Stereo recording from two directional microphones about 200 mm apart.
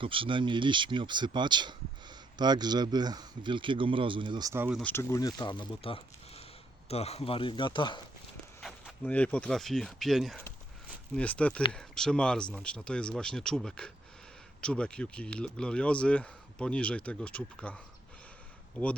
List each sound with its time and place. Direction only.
0.0 s speech: 25° right (ahead or behind)
4.8 s speech: 10° left (ahead or behind)
8.6 s speech: 5° left (ahead or behind)
18.8 s speech: 5° left (ahead or behind)